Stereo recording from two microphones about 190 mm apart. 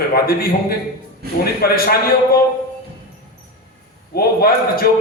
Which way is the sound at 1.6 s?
50° left (ahead or behind).